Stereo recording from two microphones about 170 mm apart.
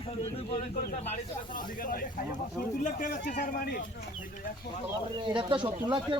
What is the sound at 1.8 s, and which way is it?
Speech, 55° left (ahead or behind).